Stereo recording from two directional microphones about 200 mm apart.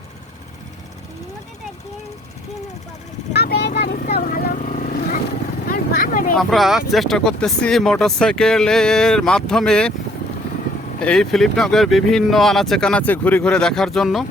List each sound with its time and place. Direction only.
3.3 s vehicle: 55° left (ahead or behind)
6.3 s speech: centre (ahead or behind)
11.0 s speech: 5° left (ahead or behind)